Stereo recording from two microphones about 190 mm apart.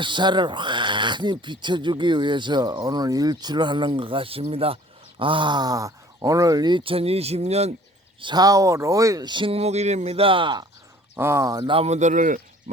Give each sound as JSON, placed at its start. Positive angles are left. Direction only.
{"t": 0.0, "sound": "speech", "side_deg": -25}
{"t": 8.2, "sound": "speech", "side_deg": -20}
{"t": 11.2, "sound": "speech", "side_deg": -15}